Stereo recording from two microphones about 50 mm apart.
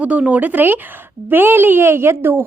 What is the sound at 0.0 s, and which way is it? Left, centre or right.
A woman's voice, right.